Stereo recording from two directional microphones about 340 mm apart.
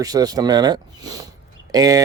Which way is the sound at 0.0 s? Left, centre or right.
Centre.